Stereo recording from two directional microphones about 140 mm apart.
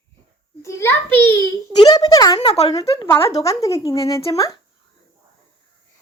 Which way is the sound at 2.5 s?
45° left (ahead or behind).